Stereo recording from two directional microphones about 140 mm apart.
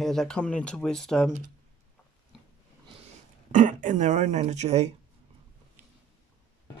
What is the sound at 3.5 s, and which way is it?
Speech, 65° right (ahead or behind).